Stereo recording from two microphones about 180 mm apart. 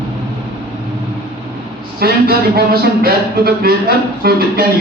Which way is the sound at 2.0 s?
60° right (ahead or behind).